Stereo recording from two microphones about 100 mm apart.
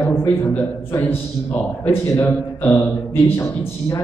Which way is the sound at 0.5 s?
20° left (ahead or behind).